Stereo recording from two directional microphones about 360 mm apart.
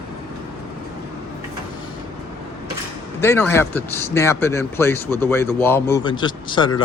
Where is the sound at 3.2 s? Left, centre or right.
Centre.